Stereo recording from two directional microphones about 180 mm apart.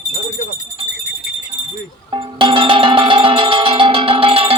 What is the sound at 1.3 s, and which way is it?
Music, 55° left (ahead or behind).